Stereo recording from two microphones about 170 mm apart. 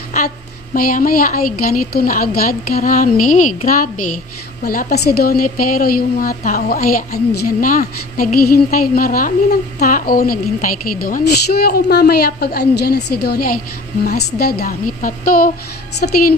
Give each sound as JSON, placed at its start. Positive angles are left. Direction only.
{"t": 0.7, "sound": "a woman's voice", "side_deg": 55}